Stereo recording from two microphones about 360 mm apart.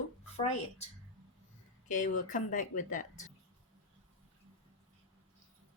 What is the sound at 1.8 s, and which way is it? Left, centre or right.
A woman's voice, left.